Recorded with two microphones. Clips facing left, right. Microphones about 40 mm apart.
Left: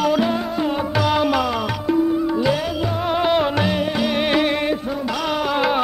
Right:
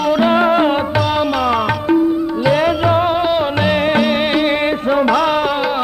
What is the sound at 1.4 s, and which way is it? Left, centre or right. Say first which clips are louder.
Music: right 6 dB; right.